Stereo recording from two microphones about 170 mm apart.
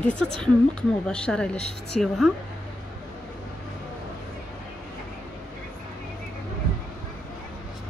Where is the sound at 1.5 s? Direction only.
40° left (ahead or behind).